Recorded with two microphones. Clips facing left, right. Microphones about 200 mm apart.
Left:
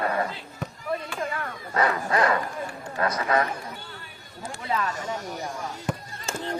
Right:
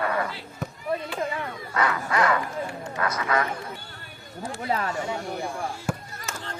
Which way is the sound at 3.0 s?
30° left (ahead or behind).